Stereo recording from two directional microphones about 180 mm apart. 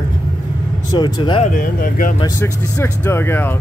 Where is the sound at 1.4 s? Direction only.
50° left (ahead or behind).